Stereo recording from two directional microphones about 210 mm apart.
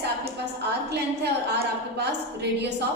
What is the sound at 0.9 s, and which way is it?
A woman's voice, 50° right (ahead or behind).